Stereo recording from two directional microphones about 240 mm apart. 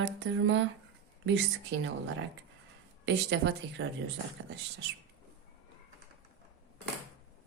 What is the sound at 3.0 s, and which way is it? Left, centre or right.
Speech, right.